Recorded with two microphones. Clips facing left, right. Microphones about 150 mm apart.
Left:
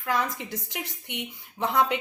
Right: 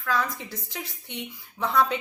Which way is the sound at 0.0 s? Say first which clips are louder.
Even; 20° left (ahead or behind).